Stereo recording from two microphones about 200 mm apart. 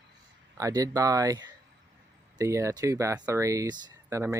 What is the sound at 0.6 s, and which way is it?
Speech, 15° right (ahead or behind).